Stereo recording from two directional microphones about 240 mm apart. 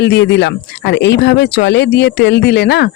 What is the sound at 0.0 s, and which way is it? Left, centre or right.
Speech, left.